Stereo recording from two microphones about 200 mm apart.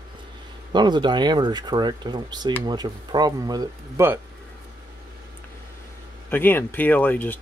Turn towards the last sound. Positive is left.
turn(degrees=10)  # may be behind; listen again after turning